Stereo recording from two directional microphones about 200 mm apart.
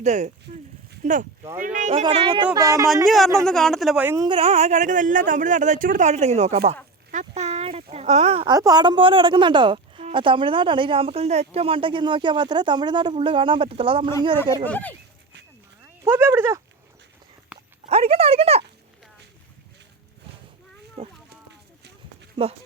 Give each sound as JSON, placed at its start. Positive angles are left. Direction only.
{"t": 0.0, "sound": "speech", "side_deg": -35}
{"t": 1.9, "sound": "a woman's voice", "side_deg": -30}
{"t": 3.3, "sound": "speech", "side_deg": 0}
{"t": 4.3, "sound": "speech", "side_deg": -30}
{"t": 7.1, "sound": "a sound", "side_deg": -35}
{"t": 8.5, "sound": "a woman's voice", "side_deg": -20}
{"t": 14.6, "sound": "speech", "side_deg": 10}
{"t": 16.0, "sound": "speech", "side_deg": -10}
{"t": 17.5, "sound": "a sound", "side_deg": -5}
{"t": 17.8, "sound": "a woman's voice", "side_deg": -30}
{"t": 21.0, "sound": "speech", "side_deg": -30}